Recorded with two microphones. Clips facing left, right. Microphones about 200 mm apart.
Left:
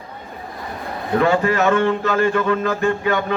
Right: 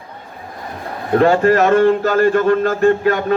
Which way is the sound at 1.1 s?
40° right (ahead or behind).